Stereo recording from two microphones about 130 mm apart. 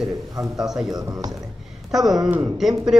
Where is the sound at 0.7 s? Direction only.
5° right (ahead or behind).